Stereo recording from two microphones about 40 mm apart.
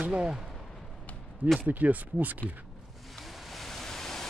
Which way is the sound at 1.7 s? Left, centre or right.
Right.